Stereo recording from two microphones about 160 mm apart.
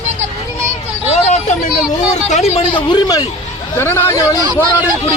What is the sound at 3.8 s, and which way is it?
Speech, 15° left (ahead or behind).